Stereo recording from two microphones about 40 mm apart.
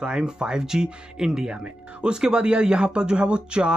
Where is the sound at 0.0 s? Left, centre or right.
Right.